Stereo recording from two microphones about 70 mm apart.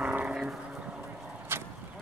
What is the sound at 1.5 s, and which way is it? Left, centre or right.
Vehicle, right.